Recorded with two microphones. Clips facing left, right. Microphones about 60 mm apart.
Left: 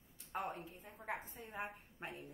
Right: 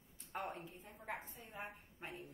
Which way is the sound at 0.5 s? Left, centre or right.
Centre.